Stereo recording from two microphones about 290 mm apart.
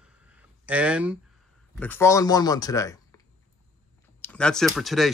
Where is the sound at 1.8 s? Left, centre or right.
Centre.